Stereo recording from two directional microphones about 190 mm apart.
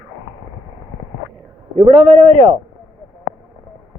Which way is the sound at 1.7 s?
35° right (ahead or behind).